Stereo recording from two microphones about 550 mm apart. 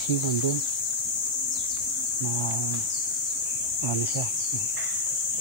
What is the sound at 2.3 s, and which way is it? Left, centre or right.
Speech, left.